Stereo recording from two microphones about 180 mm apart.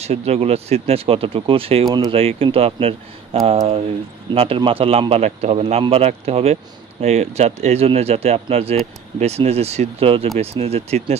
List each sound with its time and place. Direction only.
0.0 s a man's voice: 35° right (ahead or behind)
1.9 s speech: 20° right (ahead or behind)
2.1 s a man's voice: 30° right (ahead or behind)